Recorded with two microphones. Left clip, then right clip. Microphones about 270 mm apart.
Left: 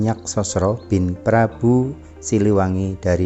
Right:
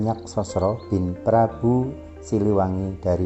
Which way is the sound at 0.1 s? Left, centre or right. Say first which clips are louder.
Left 3 dB; left.